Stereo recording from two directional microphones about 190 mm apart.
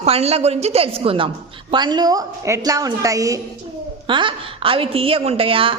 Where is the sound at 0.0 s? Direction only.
35° right (ahead or behind).